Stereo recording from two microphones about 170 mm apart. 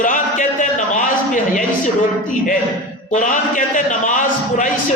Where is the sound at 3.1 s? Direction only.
50° left (ahead or behind).